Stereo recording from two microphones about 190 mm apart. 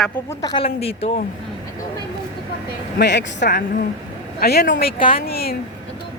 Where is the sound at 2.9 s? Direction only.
65° left (ahead or behind).